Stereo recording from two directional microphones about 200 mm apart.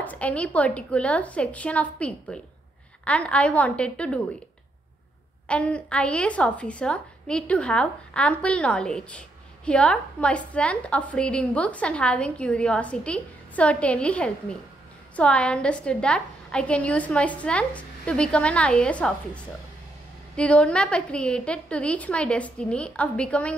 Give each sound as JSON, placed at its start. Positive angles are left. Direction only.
{"t": 0.0, "sound": "a woman's voice", "side_deg": 5}
{"t": 5.5, "sound": "a woman's voice", "side_deg": 5}